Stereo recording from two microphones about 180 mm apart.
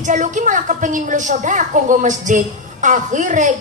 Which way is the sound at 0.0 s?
45° right (ahead or behind).